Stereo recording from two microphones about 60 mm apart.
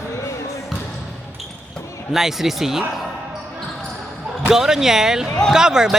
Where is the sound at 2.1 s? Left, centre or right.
Centre.